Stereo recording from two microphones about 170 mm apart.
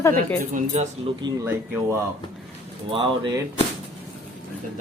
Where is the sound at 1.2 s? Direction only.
25° right (ahead or behind).